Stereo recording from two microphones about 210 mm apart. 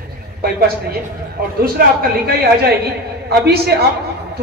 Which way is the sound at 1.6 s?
45° right (ahead or behind).